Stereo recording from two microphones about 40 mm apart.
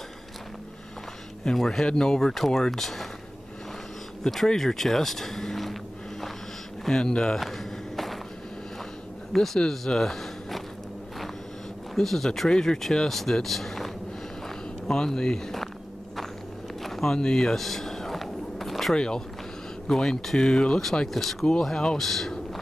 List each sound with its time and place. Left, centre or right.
1.4 s speech: centre
4.2 s speech: centre
6.8 s speech: centre
7.3 s walk: centre
9.3 s speech: centre
11.9 s speech: centre
14.9 s speech: centre
16.8 s a sound: centre
18.9 s speech: centre
21.1 s speech: centre